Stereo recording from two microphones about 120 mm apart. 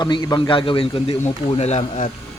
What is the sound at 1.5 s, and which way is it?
Speech, 60° left (ahead or behind).